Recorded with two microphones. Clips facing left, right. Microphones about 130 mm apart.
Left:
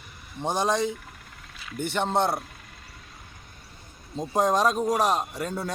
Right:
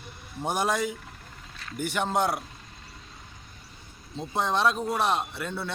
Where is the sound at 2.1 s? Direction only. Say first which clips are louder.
Left 2 dB; 25° left (ahead or behind).